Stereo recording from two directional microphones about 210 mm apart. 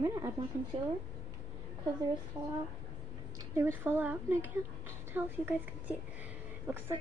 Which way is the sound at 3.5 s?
10° right (ahead or behind).